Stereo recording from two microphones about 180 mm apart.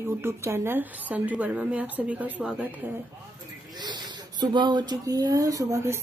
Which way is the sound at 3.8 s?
25° right (ahead or behind).